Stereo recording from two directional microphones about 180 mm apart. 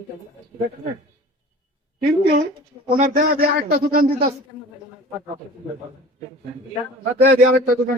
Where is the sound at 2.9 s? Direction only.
50° right (ahead or behind).